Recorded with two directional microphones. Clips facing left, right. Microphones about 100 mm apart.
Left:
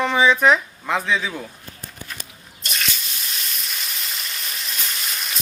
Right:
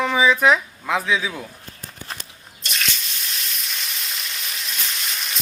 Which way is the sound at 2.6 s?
Centre (ahead or behind).